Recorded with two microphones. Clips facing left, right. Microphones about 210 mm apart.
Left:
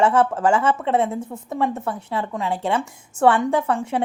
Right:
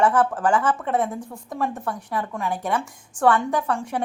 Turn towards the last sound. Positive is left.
turn(degrees=25)  # may be behind; listen again after turning